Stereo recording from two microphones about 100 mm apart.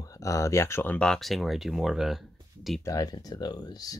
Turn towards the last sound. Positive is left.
turn(degrees=40)  # may be behind; listen again after turning